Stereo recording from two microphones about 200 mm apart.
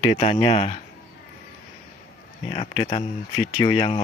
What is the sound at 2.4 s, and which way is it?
Speech, 30° left (ahead or behind).